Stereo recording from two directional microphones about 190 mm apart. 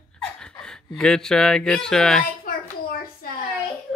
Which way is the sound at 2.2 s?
50° left (ahead or behind).